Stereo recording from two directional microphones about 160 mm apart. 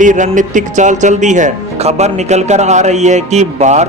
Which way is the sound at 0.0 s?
50° right (ahead or behind).